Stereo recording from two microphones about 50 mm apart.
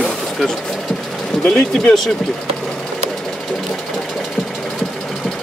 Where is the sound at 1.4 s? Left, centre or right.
Centre.